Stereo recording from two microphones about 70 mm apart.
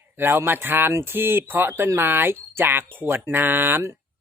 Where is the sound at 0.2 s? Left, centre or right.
Right.